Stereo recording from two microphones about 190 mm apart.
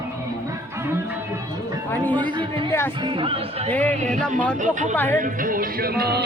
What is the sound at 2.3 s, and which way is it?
Speech, 25° right (ahead or behind).